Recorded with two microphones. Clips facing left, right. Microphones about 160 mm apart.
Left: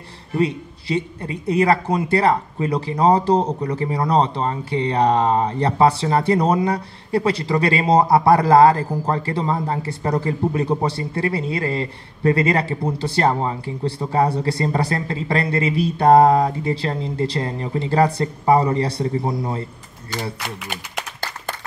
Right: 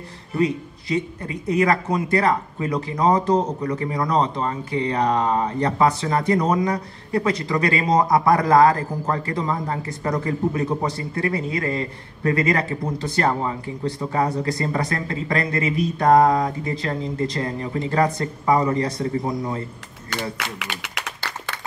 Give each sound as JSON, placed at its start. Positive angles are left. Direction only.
{"t": 0.4, "sound": "speech", "side_deg": 30}
{"t": 20.1, "sound": "speech", "side_deg": -75}